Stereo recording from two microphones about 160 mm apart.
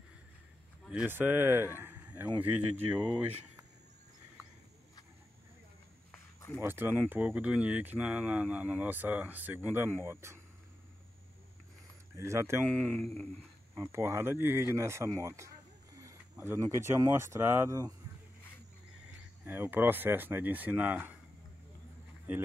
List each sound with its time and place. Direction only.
0.8 s speech: 10° right (ahead or behind)
6.1 s a sound: 10° left (ahead or behind)
6.6 s speech: 15° right (ahead or behind)
12.2 s speech: 15° right (ahead or behind)
12.6 s speech: 5° left (ahead or behind)
13.7 s speech: 15° right (ahead or behind)
19.4 s speech: 10° right (ahead or behind)